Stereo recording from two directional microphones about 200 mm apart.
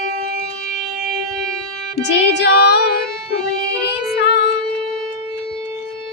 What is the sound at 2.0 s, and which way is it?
Music, 60° left (ahead or behind).